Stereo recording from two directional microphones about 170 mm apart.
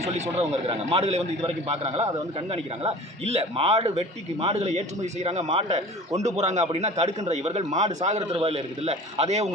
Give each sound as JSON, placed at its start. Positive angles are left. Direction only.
{"t": 0.0, "sound": "a man's voice", "side_deg": -40}